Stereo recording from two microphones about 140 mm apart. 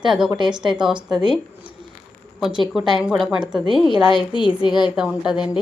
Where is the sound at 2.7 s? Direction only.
5° right (ahead or behind).